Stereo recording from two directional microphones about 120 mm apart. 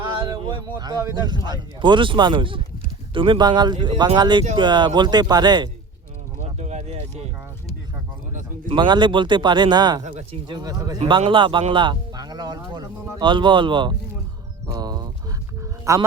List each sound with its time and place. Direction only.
0.0 s a man's voice: 40° right (ahead or behind)
6.4 s a sound: 65° right (ahead or behind)
8.3 s a sound: 90° right
8.7 s speech: 40° right (ahead or behind)
10.0 s speech: 70° right (ahead or behind)
10.5 s speech: 35° right (ahead or behind)
11.1 s speech: 45° right (ahead or behind)
14.7 s horse: 35° right (ahead or behind)
15.9 s speech: 25° right (ahead or behind)